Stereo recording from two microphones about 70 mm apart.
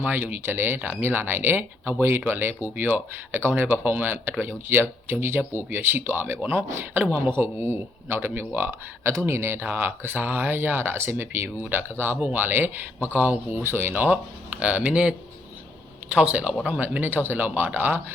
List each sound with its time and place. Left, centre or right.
0.0 s speech: right